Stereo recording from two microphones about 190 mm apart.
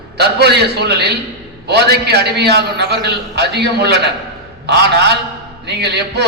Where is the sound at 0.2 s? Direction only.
60° right (ahead or behind).